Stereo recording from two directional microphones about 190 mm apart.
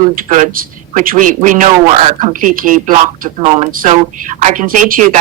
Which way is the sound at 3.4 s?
35° right (ahead or behind).